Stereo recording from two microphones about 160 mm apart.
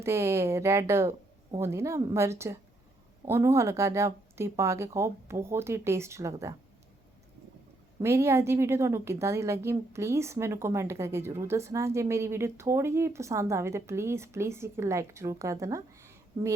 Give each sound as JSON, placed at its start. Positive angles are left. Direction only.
{"t": 0.0, "sound": "a woman's voice", "side_deg": -15}
{"t": 8.0, "sound": "a woman's voice", "side_deg": -15}